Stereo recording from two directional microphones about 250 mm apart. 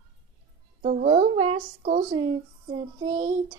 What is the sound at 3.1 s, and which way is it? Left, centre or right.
Speech, right.